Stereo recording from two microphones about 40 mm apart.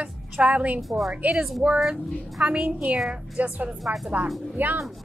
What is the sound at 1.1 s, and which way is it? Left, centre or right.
Speech, right.